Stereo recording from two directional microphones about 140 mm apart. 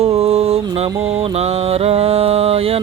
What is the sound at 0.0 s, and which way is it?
Music, 45° right (ahead or behind).